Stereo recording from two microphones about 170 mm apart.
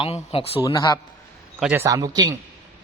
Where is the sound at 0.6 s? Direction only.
25° left (ahead or behind).